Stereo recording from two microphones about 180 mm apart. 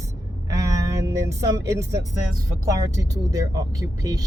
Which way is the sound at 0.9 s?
15° right (ahead or behind).